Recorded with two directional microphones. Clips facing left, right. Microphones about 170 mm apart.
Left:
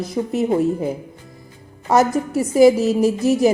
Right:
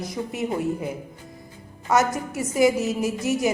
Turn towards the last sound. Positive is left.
turn(degrees=35)  # may be behind; listen again after turning